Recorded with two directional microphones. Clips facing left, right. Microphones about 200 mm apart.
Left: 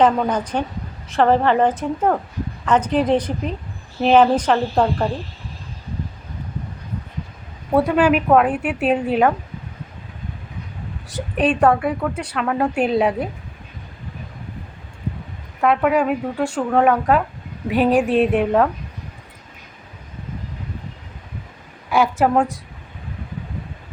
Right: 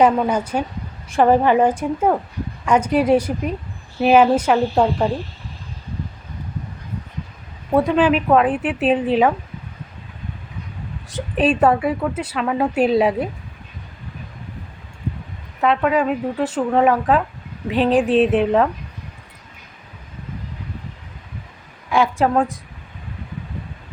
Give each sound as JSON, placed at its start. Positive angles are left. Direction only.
{"t": 0.0, "sound": "a woman's voice", "side_deg": -10}
{"t": 7.7, "sound": "a woman's voice", "side_deg": 0}
{"t": 11.3, "sound": "a woman's voice", "side_deg": -5}
{"t": 15.6, "sound": "a woman's voice", "side_deg": 5}
{"t": 21.8, "sound": "a woman's voice", "side_deg": 5}